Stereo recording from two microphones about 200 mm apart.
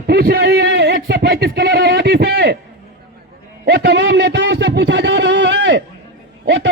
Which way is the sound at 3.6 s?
60° right (ahead or behind).